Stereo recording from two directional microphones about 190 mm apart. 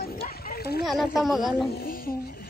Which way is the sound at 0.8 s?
Centre (ahead or behind).